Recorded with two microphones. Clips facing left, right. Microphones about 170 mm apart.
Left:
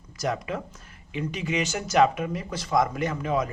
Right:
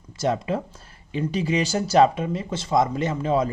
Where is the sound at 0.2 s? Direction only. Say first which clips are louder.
Right 5 dB; 25° right (ahead or behind).